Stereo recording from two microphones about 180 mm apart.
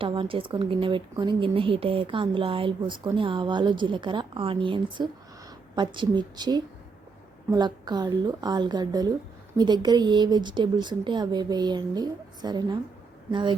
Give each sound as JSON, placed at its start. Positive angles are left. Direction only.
{"t": 0.0, "sound": "speech", "side_deg": -30}